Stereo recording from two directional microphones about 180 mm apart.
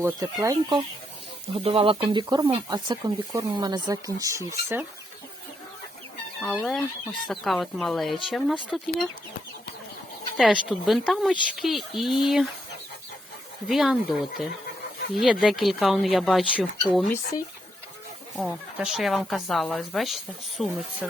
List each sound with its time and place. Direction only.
0.0 s speech: 20° right (ahead or behind)
1.5 s speech: 30° right (ahead or behind); by 4.9 s 15° right (ahead or behind)
6.4 s speech: 5° left (ahead or behind)
10.3 s speech: centre (ahead or behind)
13.7 s speech: centre (ahead or behind)
18.3 s speech: centre (ahead or behind)